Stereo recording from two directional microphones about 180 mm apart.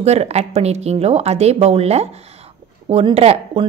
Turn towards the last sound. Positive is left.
turn(degrees=-35)  # may be behind; listen again after turning